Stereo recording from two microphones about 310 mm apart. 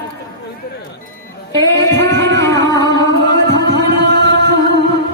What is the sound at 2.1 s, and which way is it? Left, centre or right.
Music, right.